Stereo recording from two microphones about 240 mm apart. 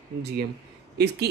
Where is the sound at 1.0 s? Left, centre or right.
Right.